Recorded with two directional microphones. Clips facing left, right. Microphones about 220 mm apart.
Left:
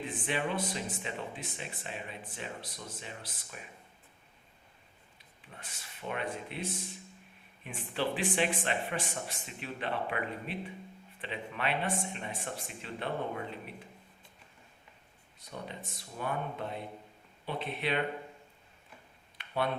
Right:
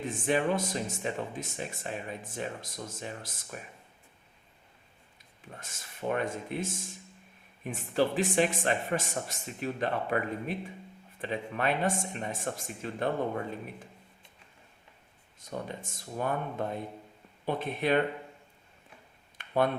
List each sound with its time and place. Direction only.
0.0 s speech: 45° right (ahead or behind)
5.5 s speech: 45° right (ahead or behind)
15.4 s speech: 45° right (ahead or behind)
19.4 s a sound: 45° right (ahead or behind)